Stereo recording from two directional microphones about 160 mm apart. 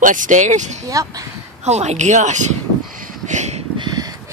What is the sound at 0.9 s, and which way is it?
Speech, 20° right (ahead or behind).